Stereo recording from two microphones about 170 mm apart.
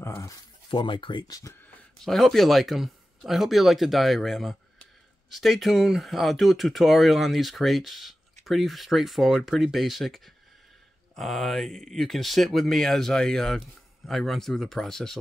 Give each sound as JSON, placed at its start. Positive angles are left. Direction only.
{"t": 0.0, "sound": "speech", "side_deg": 15}
{"t": 0.7, "sound": "speech", "side_deg": 30}
{"t": 2.0, "sound": "speech", "side_deg": 0}